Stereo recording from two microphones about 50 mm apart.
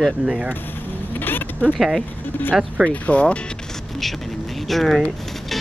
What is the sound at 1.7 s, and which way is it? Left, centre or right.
Speech, centre.